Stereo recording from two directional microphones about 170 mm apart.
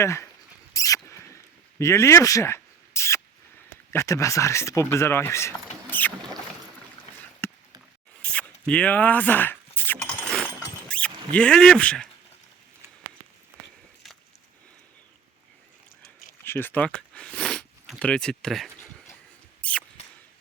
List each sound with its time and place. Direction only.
0.0 s speech: 15° left (ahead or behind)
0.7 s rodents: 20° left (ahead or behind)
1.8 s a sound: 15° left (ahead or behind)
3.9 s speech: 20° left (ahead or behind)
7.4 s a sound: 10° left (ahead or behind)
8.2 s zipper: 5° left (ahead or behind)
10.8 s speech: 5° left (ahead or behind)
16.4 s a sound: 15° left (ahead or behind)
19.6 s mouse: 5° left (ahead or behind)